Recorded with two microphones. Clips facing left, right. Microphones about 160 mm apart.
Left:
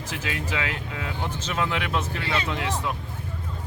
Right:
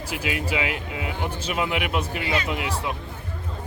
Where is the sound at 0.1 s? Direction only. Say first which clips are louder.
Right 4 dB; 10° right (ahead or behind).